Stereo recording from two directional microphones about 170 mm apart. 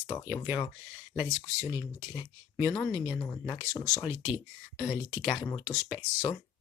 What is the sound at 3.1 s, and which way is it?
Speech, 15° left (ahead or behind).